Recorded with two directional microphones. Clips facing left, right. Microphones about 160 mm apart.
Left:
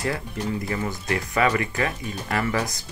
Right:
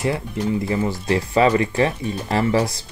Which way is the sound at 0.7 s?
25° right (ahead or behind).